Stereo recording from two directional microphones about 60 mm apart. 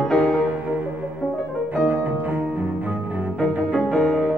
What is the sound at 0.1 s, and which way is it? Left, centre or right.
Music, centre.